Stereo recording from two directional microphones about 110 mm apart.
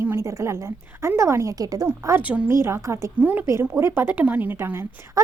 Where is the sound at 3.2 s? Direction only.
15° right (ahead or behind).